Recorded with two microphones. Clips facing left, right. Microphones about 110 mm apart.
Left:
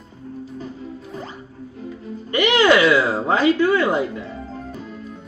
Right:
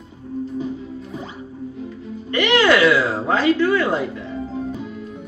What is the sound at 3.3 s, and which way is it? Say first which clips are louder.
Speech: even; 15° left (ahead or behind).